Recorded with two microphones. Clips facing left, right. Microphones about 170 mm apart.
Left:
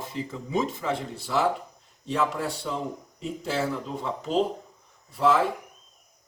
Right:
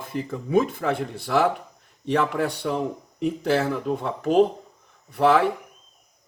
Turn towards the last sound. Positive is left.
turn(degrees=-70)  # may be behind; listen again after turning